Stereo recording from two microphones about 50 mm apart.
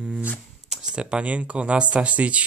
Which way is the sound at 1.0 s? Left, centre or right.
Right.